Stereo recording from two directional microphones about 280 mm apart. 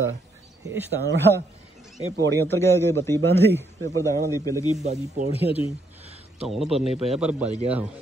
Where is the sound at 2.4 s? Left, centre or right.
Centre.